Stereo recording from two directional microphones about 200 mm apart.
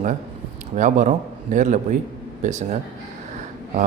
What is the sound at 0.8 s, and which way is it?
Speech, 40° right (ahead or behind).